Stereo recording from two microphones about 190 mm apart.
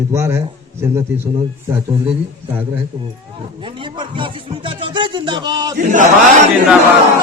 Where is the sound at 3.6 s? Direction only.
25° right (ahead or behind).